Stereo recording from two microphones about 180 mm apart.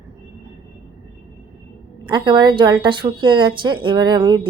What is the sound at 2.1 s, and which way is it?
A woman's voice, 25° right (ahead or behind).